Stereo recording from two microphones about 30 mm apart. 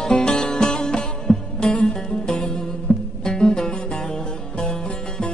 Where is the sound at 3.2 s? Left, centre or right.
Left.